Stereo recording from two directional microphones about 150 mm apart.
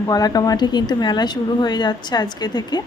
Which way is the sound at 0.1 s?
25° left (ahead or behind).